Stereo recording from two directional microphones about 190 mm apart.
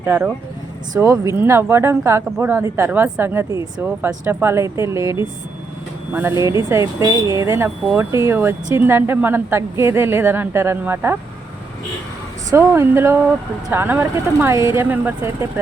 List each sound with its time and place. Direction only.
0.0 s speech: 10° right (ahead or behind)
6.7 s speech: 15° right (ahead or behind)
12.5 s speech: 10° right (ahead or behind)